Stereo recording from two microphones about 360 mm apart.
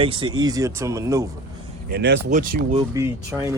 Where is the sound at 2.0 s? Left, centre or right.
Right.